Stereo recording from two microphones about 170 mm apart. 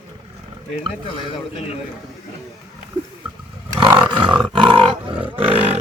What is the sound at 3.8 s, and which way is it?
Roar, 25° right (ahead or behind).